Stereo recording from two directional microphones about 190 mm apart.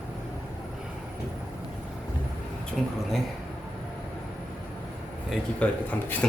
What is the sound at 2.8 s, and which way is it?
Speech, centre (ahead or behind).